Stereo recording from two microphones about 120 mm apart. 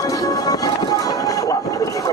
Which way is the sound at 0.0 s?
30° left (ahead or behind).